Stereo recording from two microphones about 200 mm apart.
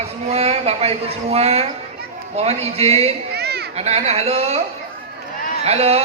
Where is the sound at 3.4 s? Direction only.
55° right (ahead or behind).